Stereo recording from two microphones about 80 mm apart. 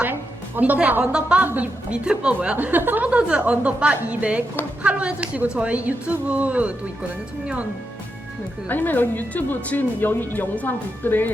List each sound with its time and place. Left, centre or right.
0.0 s a woman's voice: right
8.7 s speech: left